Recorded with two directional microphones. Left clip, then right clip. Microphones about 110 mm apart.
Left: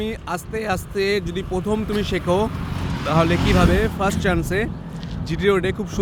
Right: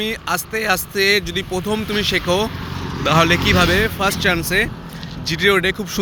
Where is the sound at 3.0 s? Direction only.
5° left (ahead or behind); by 4.4 s 30° left (ahead or behind).